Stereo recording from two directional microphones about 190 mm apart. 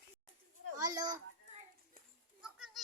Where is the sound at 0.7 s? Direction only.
20° right (ahead or behind).